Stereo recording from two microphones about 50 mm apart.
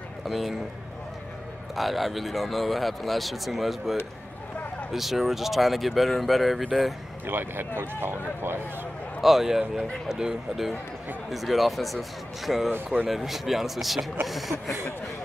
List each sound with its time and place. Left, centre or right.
0.3 s speech: centre
1.8 s speech: centre
4.9 s speech: centre
7.2 s speech: right
9.2 s speech: centre